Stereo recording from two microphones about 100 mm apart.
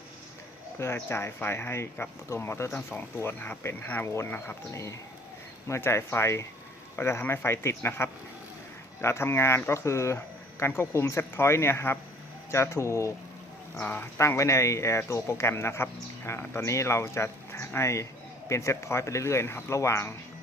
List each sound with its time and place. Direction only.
1.0 s speech: 25° left (ahead or behind)
13.7 s speech: 15° left (ahead or behind)
14.2 s speech: 30° left (ahead or behind)